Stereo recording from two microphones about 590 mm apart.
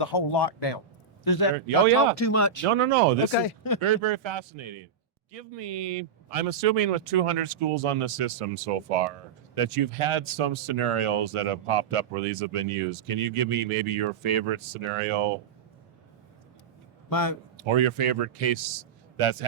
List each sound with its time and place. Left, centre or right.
0.0 s speech: left
2.6 s speech: right
3.3 s speech: left
3.8 s a man's voice: right
5.3 s speech: right
9.6 s speech: right
17.1 s a man's voice: left
17.6 s speech: right
19.1 s a man's voice: right